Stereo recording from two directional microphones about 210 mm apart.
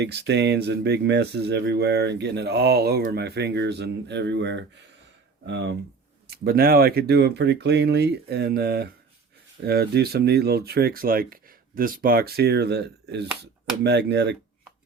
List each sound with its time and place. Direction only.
0.0 s speech: 55° right (ahead or behind)